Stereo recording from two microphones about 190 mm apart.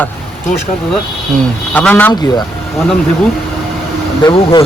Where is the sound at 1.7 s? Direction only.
10° left (ahead or behind).